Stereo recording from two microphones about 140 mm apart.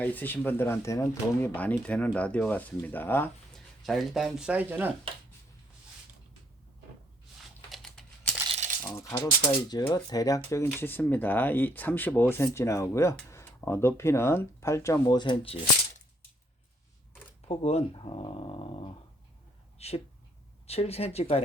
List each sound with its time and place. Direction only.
0.0 s speech: 10° left (ahead or behind)
3.5 s speech: centre (ahead or behind)
7.7 s a sound: 5° left (ahead or behind)
8.4 s rattle: 50° right (ahead or behind)
8.8 s speech: 25° left (ahead or behind)
17.5 s speech: 50° left (ahead or behind)